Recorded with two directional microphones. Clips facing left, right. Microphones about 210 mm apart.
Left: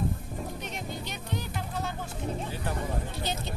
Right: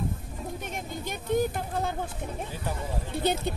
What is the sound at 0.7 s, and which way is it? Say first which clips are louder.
Vehicle: right 2 dB; 50° right (ahead or behind).